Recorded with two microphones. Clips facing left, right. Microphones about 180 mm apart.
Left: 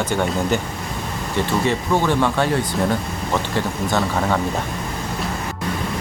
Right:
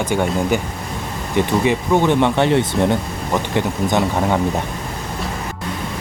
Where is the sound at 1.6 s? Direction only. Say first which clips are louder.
Right 3 dB; 15° right (ahead or behind).